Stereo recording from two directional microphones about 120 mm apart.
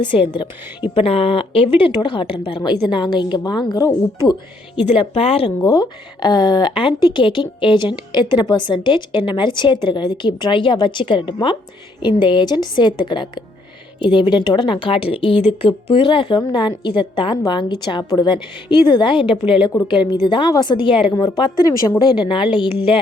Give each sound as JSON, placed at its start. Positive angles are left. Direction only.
{"t": 0.0, "sound": "speech", "side_deg": 45}
{"t": 4.9, "sound": "speech", "side_deg": 55}
{"t": 5.5, "sound": "speech", "side_deg": 30}